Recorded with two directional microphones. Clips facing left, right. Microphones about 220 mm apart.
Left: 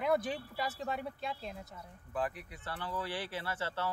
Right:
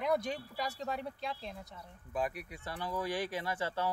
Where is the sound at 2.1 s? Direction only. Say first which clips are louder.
Right 1 dB; 10° right (ahead or behind).